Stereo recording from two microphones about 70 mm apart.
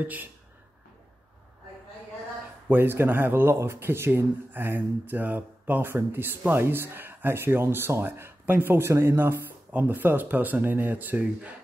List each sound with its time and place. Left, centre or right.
0.0 s speech: right
2.7 s speech: right